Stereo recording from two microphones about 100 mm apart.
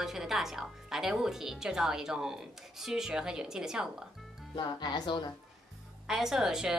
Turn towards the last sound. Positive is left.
turn(degrees=-5)  # may be behind; listen again after turning